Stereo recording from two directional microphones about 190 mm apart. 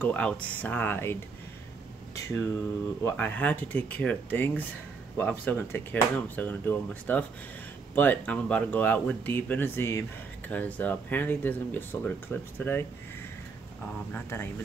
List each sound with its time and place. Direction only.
0.0 s speech: 5° left (ahead or behind)
2.1 s speech: 15° left (ahead or behind)
14.1 s speech: 10° left (ahead or behind)